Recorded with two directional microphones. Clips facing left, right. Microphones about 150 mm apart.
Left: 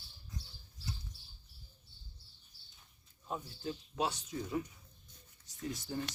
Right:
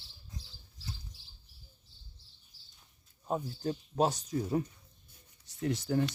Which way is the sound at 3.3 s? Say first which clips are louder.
Right 7 dB; 45° right (ahead or behind).